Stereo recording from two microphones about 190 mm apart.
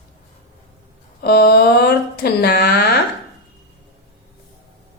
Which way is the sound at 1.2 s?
55° left (ahead or behind).